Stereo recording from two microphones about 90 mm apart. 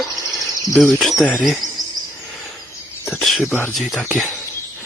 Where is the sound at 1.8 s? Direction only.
45° right (ahead or behind).